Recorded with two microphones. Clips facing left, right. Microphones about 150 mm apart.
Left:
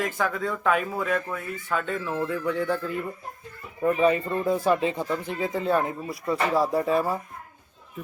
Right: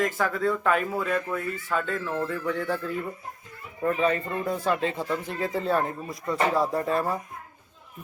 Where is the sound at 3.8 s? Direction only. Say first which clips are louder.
Left 3 dB; 10° left (ahead or behind).